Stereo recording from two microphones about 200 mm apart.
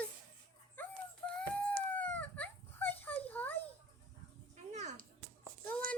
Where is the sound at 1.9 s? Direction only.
5° left (ahead or behind).